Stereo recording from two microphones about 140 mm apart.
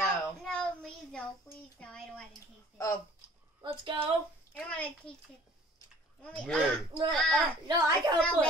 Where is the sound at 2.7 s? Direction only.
25° left (ahead or behind).